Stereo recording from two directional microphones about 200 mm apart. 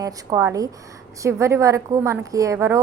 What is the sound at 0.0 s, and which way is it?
A woman's voice, 15° right (ahead or behind).